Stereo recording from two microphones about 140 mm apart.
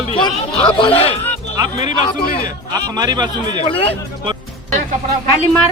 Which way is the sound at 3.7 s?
40° left (ahead or behind).